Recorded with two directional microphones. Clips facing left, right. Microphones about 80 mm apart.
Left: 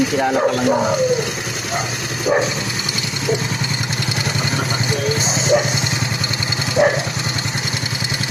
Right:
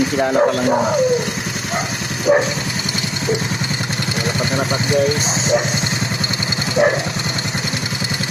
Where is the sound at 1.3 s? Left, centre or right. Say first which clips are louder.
Right 1 dB; right.